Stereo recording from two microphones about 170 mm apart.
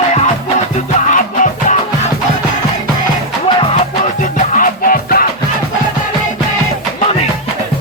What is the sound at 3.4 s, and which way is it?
Music, 30° left (ahead or behind).